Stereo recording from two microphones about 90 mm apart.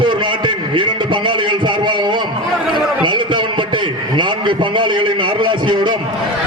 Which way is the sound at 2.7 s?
60° right (ahead or behind).